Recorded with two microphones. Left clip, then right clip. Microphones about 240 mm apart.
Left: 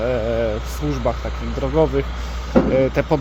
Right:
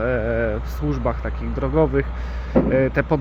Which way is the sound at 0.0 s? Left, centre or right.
Centre.